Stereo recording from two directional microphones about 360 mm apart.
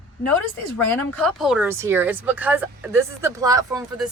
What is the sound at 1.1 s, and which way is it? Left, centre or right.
Speech, centre.